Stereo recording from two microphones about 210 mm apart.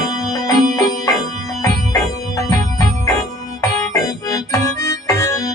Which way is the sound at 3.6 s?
15° left (ahead or behind).